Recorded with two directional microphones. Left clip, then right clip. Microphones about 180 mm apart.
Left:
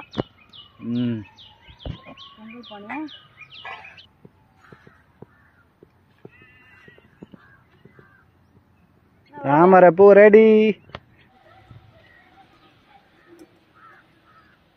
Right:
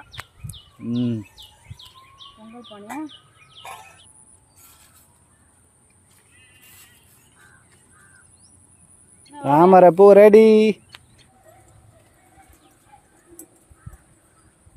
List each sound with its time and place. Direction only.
0.8 s speech: 20° right (ahead or behind)
2.7 s speech: 25° left (ahead or behind)
9.4 s speech: 15° right (ahead or behind)